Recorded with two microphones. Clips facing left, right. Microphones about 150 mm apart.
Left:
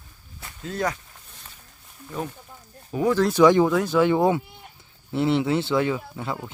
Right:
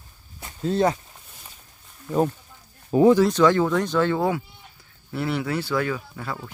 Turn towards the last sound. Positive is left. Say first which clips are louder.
# left 2 dB
turn(degrees=20)  # may be behind; listen again after turning